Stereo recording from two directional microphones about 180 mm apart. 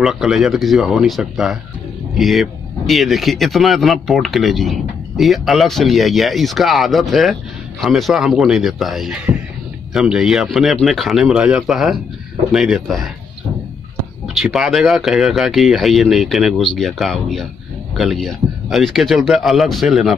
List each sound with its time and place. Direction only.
0.0 s speech: centre (ahead or behind)
14.2 s speech: centre (ahead or behind)